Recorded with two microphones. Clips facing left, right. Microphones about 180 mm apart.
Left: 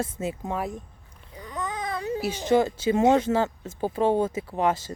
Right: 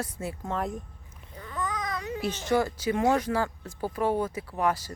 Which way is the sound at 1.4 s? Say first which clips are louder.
Left 1 dB; 20° left (ahead or behind).